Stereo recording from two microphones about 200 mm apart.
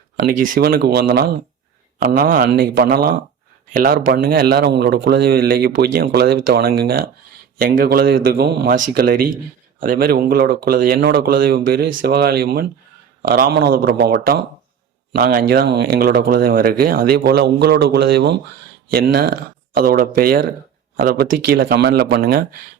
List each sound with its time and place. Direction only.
0.2 s a man's voice: 45° right (ahead or behind)